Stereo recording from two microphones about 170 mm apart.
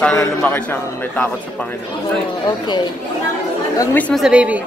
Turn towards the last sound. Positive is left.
turn(degrees=-5)  # may be behind; listen again after turning